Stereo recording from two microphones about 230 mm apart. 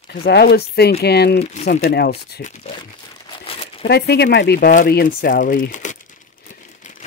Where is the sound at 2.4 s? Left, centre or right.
Left.